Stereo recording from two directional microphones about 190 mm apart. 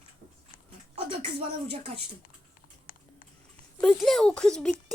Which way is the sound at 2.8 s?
45° left (ahead or behind).